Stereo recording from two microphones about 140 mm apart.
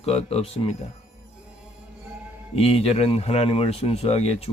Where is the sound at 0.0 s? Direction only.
45° left (ahead or behind).